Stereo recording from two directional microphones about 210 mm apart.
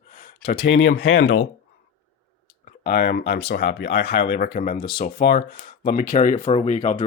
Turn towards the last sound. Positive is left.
turn(degrees=35)  # may be behind; listen again after turning